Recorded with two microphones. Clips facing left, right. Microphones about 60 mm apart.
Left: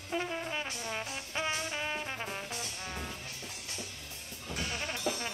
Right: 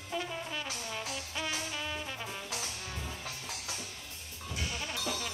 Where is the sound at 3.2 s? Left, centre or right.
Right.